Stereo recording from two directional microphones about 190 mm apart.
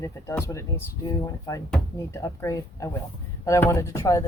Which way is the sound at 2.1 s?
15° left (ahead or behind).